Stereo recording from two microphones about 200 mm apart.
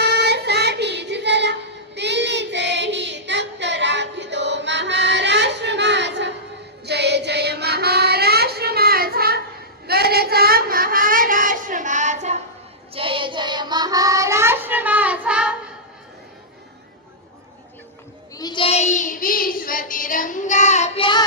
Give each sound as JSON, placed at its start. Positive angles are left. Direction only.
{"t": 0.0, "sound": "child singing", "side_deg": -55}
{"t": 18.3, "sound": "child singing", "side_deg": 20}